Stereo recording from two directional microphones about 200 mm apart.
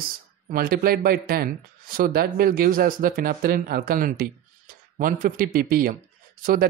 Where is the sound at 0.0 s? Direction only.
45° right (ahead or behind).